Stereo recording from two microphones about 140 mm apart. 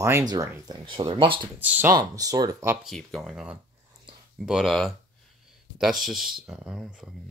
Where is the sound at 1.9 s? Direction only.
25° right (ahead or behind).